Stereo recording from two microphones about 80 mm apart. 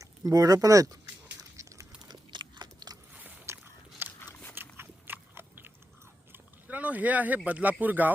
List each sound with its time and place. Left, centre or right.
0.0 s speech: right
1.4 s a sound: right
2.3 s biting: right
3.4 s biting: right
6.3 s speech: centre